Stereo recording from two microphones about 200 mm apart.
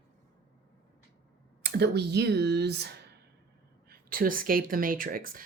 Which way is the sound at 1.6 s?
55° right (ahead or behind).